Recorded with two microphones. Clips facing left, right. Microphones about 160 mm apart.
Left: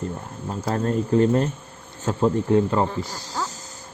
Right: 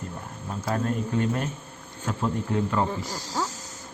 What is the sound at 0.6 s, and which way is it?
Speech, 40° left (ahead or behind).